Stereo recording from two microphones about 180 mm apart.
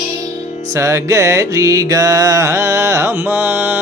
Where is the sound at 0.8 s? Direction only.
15° right (ahead or behind).